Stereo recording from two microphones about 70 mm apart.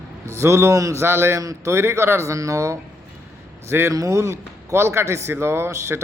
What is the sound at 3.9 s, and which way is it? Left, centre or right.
Speech, right.